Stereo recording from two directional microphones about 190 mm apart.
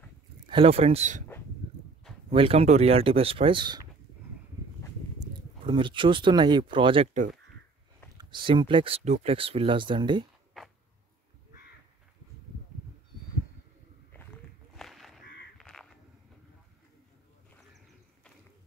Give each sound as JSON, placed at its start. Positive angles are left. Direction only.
{"t": 0.5, "sound": "speech", "side_deg": -30}
{"t": 2.3, "sound": "speech", "side_deg": -30}
{"t": 5.2, "sound": "speech", "side_deg": -25}
{"t": 8.2, "sound": "speech", "side_deg": -25}
{"t": 14.8, "sound": "crow", "side_deg": 0}